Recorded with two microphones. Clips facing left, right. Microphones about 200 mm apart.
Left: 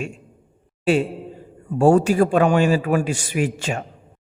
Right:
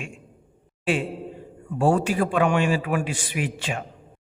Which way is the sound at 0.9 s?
40° left (ahead or behind).